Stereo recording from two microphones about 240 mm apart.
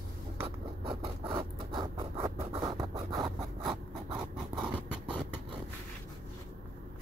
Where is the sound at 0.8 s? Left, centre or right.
Right.